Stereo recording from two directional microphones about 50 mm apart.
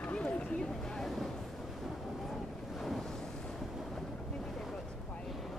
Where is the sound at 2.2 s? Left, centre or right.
Centre.